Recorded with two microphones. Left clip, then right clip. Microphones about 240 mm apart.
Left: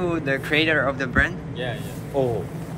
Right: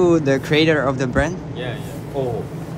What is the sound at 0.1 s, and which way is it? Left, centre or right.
Speech, right.